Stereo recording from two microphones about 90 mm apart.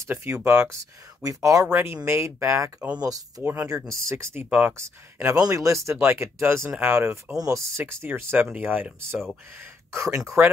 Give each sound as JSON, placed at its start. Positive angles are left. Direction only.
{"t": 0.0, "sound": "speech", "side_deg": -30}
{"t": 1.2, "sound": "speech", "side_deg": -40}
{"t": 1.7, "sound": "speech", "side_deg": -25}
{"t": 3.0, "sound": "speech", "side_deg": -45}
{"t": 4.5, "sound": "speech", "side_deg": -15}
{"t": 4.7, "sound": "speech", "side_deg": -30}
{"t": 10.4, "sound": "speech", "side_deg": -20}